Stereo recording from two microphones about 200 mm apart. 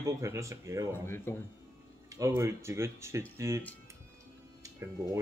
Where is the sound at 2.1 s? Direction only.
15° right (ahead or behind).